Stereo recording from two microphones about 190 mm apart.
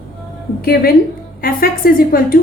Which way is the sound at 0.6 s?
50° left (ahead or behind).